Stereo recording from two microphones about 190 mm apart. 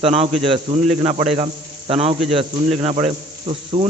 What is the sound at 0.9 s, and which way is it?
Insect, 35° right (ahead or behind).